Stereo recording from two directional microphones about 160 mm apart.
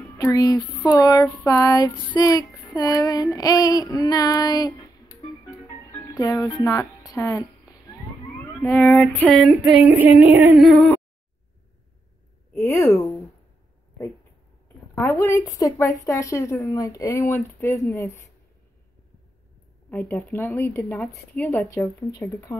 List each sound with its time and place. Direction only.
0.2 s child singing: 25° left (ahead or behind)
1.2 s a woman's voice: 15° left (ahead or behind)
1.6 s child singing: 25° left (ahead or behind)
2.6 s a sound: 25° left (ahead or behind)
3.3 s child singing: 20° left (ahead or behind)
6.0 s speech: 20° left (ahead or behind)
8.5 s female singing: 10° left (ahead or behind); by 10.5 s 10° right (ahead or behind)
10.6 s female singing: centre (ahead or behind)
12.5 s a woman's voice: 15° left (ahead or behind)
15.0 s a woman's voice: 10° left (ahead or behind)
19.9 s a woman's voice: 10° left (ahead or behind)